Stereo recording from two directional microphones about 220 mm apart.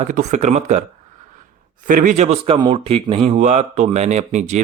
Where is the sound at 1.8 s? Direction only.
35° right (ahead or behind).